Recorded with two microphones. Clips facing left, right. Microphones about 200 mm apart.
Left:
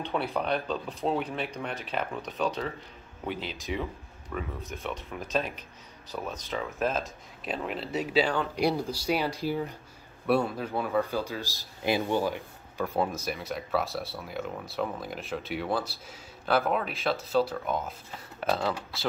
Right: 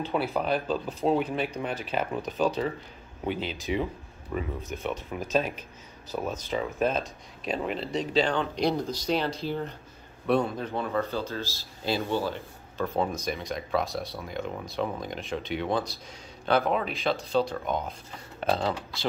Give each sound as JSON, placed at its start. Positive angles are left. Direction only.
{"t": 0.0, "sound": "speech", "side_deg": -5}
{"t": 4.3, "sound": "speech", "side_deg": -15}
{"t": 4.6, "sound": "speech", "side_deg": 0}
{"t": 18.5, "sound": "speech", "side_deg": -20}